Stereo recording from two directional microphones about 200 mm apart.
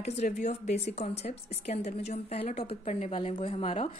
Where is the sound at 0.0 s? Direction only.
35° left (ahead or behind).